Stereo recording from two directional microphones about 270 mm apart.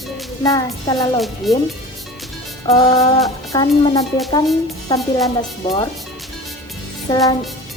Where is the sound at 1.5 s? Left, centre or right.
Centre.